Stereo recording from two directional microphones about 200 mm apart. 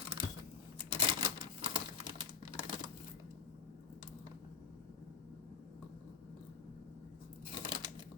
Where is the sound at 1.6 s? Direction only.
25° right (ahead or behind).